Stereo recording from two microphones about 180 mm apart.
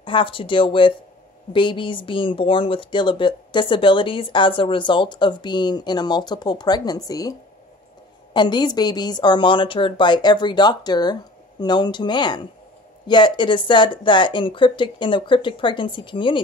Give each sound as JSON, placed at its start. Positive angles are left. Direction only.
{"t": 0.0, "sound": "speech", "side_deg": 30}